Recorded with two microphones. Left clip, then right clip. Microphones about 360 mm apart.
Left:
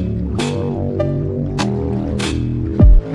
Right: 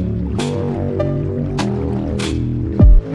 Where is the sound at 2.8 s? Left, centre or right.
Right.